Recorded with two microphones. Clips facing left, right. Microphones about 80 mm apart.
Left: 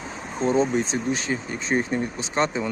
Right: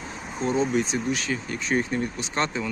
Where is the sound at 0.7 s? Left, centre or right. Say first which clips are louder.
Left 1 dB; left.